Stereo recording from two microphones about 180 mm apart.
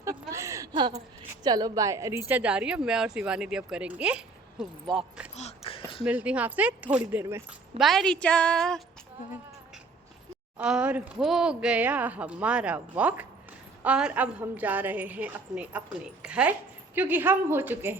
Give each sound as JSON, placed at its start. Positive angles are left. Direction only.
{"t": 0.0, "sound": "a sound", "side_deg": -15}
{"t": 1.5, "sound": "speech", "side_deg": -20}
{"t": 5.4, "sound": "a sound", "side_deg": 35}
{"t": 6.1, "sound": "speech", "side_deg": -10}
{"t": 7.8, "sound": "speech", "side_deg": 0}
{"t": 10.6, "sound": "speech", "side_deg": -5}